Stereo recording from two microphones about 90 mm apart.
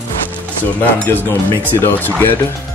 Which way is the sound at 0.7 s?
20° left (ahead or behind).